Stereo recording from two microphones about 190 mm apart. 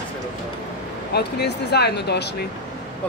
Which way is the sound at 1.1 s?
60° left (ahead or behind).